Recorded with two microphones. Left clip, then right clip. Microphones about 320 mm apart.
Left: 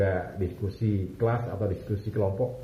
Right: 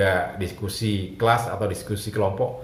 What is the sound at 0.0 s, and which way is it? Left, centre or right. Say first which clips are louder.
Speech: right 6 dB; right.